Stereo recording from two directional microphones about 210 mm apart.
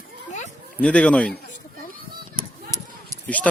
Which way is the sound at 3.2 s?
5° left (ahead or behind).